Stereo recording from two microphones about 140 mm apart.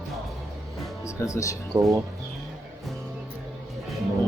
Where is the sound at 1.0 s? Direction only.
20° left (ahead or behind).